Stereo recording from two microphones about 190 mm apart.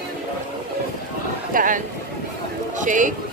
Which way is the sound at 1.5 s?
45° right (ahead or behind).